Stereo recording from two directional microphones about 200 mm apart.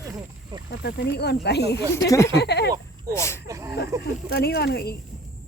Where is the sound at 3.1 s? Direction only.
15° left (ahead or behind).